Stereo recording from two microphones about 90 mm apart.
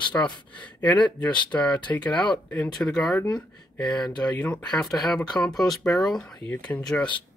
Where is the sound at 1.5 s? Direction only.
15° left (ahead or behind).